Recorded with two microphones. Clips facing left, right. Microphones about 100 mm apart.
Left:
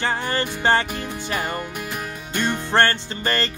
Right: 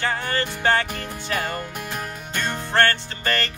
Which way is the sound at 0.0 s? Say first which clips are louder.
Left 1 dB; 25° left (ahead or behind).